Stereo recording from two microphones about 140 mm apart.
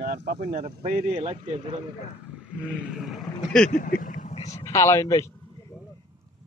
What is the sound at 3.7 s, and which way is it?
Speech, 75° left (ahead or behind).